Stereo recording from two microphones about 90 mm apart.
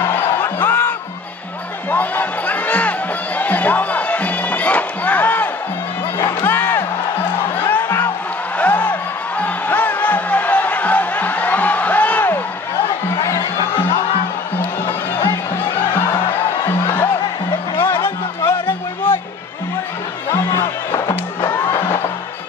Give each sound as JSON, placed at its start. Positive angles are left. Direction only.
{"t": 0.1, "sound": "music", "side_deg": 20}
{"t": 13.4, "sound": "music", "side_deg": 55}
{"t": 15.5, "sound": "music", "side_deg": 25}
{"t": 17.7, "sound": "music", "side_deg": 25}
{"t": 21.7, "sound": "music", "side_deg": 30}